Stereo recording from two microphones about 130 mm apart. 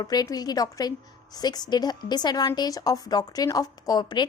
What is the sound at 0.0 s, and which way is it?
A woman's voice, 30° left (ahead or behind).